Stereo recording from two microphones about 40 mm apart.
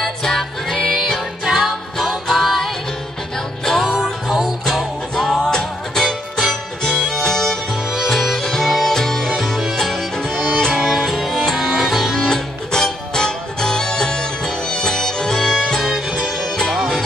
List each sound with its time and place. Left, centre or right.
0.0 s music: centre
3.3 s music: centre
4.3 s music: centre
5.1 s music: centre
7.7 s music: centre
8.4 s music: centre
10.8 s music: centre
12.7 s music: centre